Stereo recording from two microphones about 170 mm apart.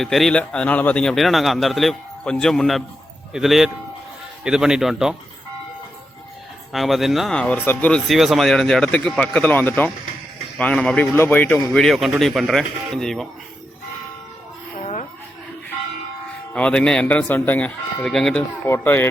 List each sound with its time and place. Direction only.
0.0 s speech: centre (ahead or behind)
6.7 s speech: centre (ahead or behind)
16.5 s speech: 5° left (ahead or behind)